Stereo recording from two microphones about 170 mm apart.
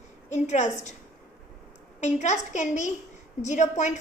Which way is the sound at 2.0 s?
45° left (ahead or behind).